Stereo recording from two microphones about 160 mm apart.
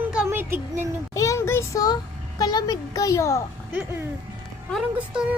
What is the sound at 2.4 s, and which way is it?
A woman's voice, 25° left (ahead or behind).